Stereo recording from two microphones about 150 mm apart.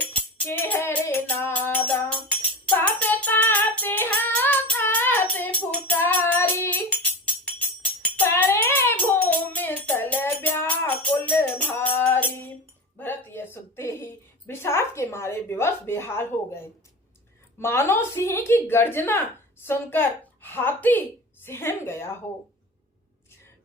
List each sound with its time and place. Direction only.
0.1 s music: 10° left (ahead or behind)
2.6 s child singing: 10° left (ahead or behind)
6.6 s music: 10° left (ahead or behind)
13.0 s a sound: 15° left (ahead or behind)
17.6 s a woman's voice: 15° left (ahead or behind)